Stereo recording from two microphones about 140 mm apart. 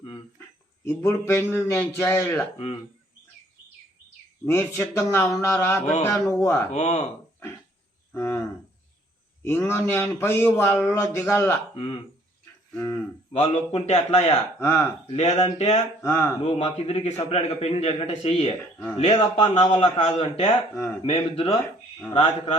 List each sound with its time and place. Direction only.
0.9 s a man's voice: 20° left (ahead or behind)
4.4 s speech: 20° left (ahead or behind)
5.8 s speech: 55° left (ahead or behind)
6.1 s speech: 20° left (ahead or behind)
6.7 s a man's voice: 55° left (ahead or behind)
8.1 s a sound: 15° left (ahead or behind)
9.4 s a man's voice: 15° left (ahead or behind)
11.7 s speech: 40° left (ahead or behind)
12.7 s cattle: 15° left (ahead or behind)
13.3 s a man's voice: 50° left (ahead or behind)
14.6 s a man's voice: 20° left (ahead or behind)
15.0 s a man's voice: 45° left (ahead or behind)
16.0 s speech: 20° left (ahead or behind)
16.4 s a man's voice: 50° left (ahead or behind)